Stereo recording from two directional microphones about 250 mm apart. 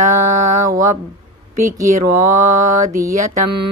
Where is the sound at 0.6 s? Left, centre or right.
Centre.